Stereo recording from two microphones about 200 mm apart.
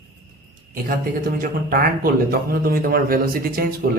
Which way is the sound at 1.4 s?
45° right (ahead or behind).